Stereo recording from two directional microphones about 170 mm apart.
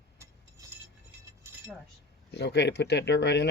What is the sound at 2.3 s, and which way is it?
Speech, 80° left.